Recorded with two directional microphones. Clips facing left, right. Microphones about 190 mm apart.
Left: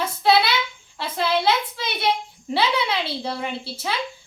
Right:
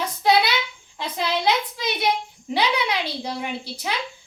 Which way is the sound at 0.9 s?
15° right (ahead or behind).